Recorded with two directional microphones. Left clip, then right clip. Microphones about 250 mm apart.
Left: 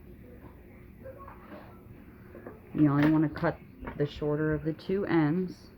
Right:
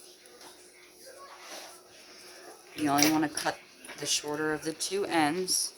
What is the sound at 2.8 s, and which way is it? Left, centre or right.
Speech, right.